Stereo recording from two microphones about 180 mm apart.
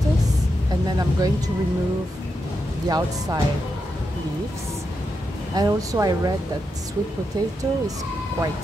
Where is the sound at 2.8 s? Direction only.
25° right (ahead or behind).